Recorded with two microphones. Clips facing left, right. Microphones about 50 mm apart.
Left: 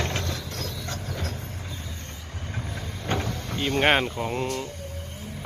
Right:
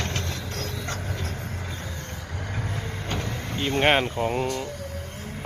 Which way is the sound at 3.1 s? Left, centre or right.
Left.